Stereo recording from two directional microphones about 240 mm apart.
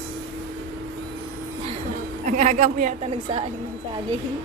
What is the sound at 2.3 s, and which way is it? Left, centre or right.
A woman's voice, right.